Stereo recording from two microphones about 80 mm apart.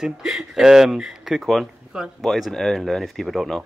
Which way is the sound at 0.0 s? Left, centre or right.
Centre.